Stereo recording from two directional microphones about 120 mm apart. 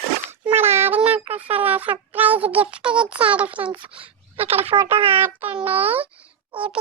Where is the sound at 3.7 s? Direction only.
50° right (ahead or behind).